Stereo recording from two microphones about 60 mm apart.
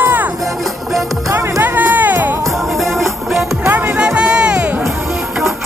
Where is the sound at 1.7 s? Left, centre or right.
Right.